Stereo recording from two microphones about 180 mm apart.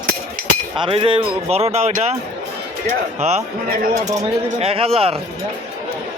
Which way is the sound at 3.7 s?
55° right (ahead or behind).